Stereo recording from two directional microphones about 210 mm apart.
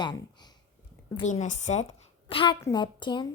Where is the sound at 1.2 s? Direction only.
35° left (ahead or behind).